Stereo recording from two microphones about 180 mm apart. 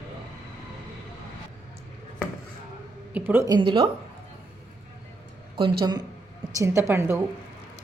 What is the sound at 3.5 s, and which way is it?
Speech, 30° right (ahead or behind).